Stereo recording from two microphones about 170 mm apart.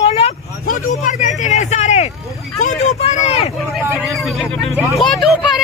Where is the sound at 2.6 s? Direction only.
45° left (ahead or behind).